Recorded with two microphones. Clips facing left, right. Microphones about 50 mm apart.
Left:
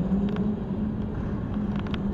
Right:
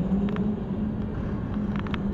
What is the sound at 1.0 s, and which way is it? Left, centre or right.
Vehicle, right.